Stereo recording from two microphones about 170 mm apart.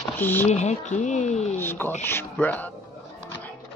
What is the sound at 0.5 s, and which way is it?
Speech, 45° left (ahead or behind).